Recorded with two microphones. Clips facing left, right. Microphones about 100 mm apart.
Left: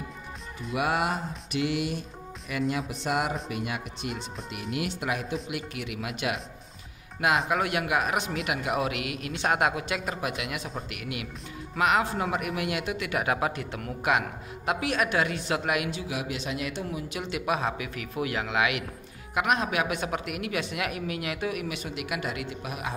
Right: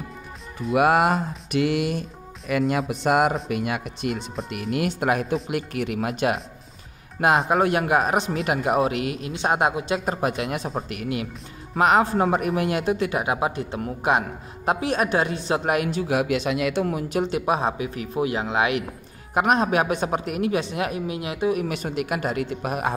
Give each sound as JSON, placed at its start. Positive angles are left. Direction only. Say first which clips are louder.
{"t": 0.7, "sound": "speech", "louder": "right 8 dB", "side_deg": -55}
{"t": 2.9, "sound": "speech", "louder": "right 8 dB", "side_deg": -60}
{"t": 15.6, "sound": "speech", "louder": "right 6 dB", "side_deg": -40}
{"t": 17.1, "sound": "speech", "louder": "right 5 dB", "side_deg": -35}
{"t": 21.6, "sound": "speech", "louder": "right 7 dB", "side_deg": -45}